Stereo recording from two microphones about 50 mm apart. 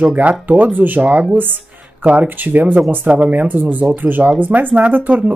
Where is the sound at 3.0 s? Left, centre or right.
Right.